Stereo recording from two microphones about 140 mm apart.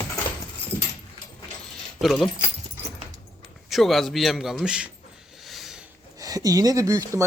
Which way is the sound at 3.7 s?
Centre (ahead or behind).